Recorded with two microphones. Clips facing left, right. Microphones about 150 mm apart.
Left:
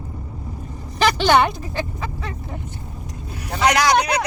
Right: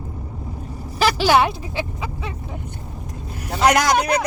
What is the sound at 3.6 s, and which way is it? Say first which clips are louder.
Speech: right 1 dB; 50° right (ahead or behind).